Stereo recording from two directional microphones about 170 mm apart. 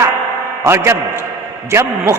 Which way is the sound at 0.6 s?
15° right (ahead or behind).